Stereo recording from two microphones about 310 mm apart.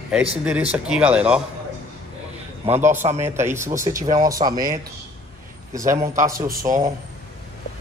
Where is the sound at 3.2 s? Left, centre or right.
Centre.